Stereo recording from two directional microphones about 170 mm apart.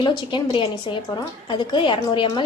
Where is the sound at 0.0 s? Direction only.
30° left (ahead or behind).